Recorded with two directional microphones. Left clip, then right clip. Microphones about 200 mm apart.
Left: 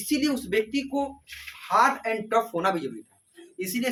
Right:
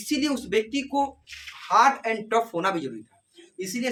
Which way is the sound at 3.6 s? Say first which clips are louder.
Even; 5° right (ahead or behind).